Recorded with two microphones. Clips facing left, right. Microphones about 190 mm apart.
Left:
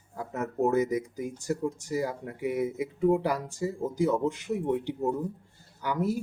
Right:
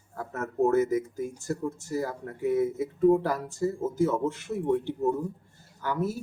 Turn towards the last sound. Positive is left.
turn(degrees=15)  # may be behind; listen again after turning